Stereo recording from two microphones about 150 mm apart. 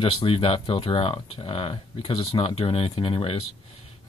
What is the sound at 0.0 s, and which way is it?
Speech, 40° left (ahead or behind).